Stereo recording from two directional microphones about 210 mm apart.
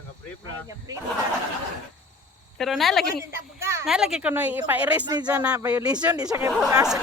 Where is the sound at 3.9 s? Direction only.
Centre (ahead or behind).